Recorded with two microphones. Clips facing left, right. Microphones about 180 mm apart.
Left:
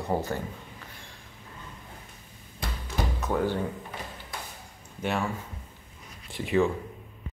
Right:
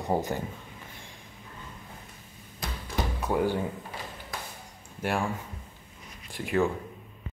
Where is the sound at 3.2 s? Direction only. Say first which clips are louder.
Right 1 dB; 10° right (ahead or behind).